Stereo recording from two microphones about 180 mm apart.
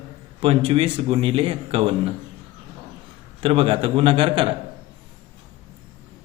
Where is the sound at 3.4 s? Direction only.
30° right (ahead or behind).